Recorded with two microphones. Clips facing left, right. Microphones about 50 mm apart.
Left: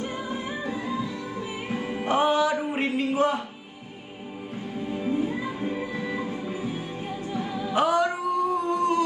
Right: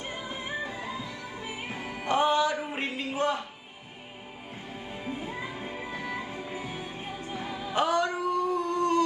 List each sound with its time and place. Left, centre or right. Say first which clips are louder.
1.7 s music: left 7 dB; left
2.0 s music: left 2 dB; centre
4.9 s music: left 9 dB; left
6.2 s music: left 6 dB; right
7.7 s music: left 3 dB; centre